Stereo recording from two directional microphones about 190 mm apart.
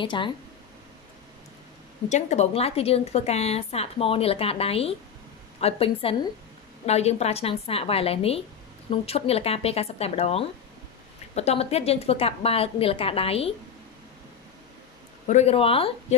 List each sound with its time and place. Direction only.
0.0 s speech: 25° left (ahead or behind)
2.0 s a woman's voice: 35° left (ahead or behind)
15.2 s a woman's voice: 35° left (ahead or behind)